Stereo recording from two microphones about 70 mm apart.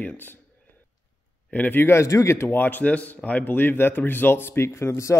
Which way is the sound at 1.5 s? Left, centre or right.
Left.